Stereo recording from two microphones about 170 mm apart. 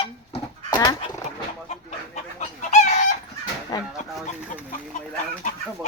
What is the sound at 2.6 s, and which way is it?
Chicken, 45° left (ahead or behind).